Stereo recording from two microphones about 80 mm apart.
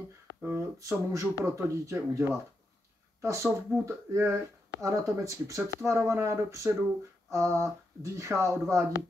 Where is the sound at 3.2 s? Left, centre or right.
Right.